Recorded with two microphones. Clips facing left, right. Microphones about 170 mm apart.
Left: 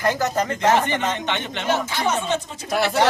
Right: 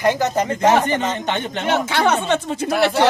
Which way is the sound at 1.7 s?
70° right (ahead or behind).